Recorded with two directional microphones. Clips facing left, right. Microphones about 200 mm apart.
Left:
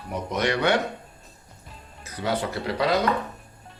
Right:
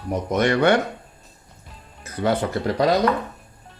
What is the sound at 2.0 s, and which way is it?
Speech, 50° right (ahead or behind).